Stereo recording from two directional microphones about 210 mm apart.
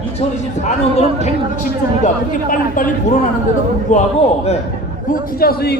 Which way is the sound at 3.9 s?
35° left (ahead or behind).